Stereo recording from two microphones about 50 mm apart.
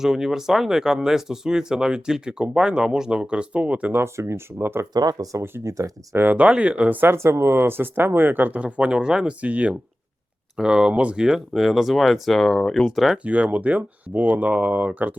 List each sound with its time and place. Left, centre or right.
0.0 s speech: centre; by 3.9 s right
4.2 s speech: right
4.5 s speech: right
5.6 s speech: right
6.3 s speech: right
6.9 s speech: right
7.2 s speech: right
8.5 s speech: right
9.4 s speech: right
10.6 s speech: centre
11.3 s speech: centre
13.2 s speech: right